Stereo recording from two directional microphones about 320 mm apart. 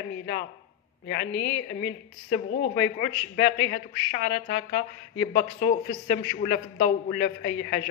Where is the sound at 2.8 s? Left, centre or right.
Left.